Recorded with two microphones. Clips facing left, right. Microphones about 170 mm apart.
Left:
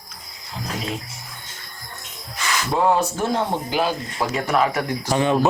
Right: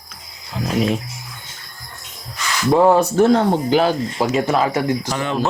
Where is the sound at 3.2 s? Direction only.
75° right (ahead or behind).